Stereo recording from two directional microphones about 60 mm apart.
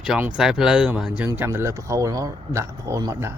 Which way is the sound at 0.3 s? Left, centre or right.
Centre.